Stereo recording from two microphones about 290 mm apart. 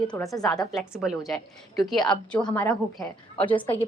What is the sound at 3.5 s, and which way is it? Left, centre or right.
Speech, centre.